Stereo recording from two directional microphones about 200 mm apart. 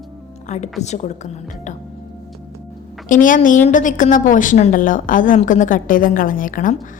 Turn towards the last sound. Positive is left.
turn(degrees=40)  # may be behind; listen again after turning